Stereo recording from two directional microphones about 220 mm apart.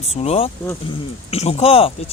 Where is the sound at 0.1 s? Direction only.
30° left (ahead or behind).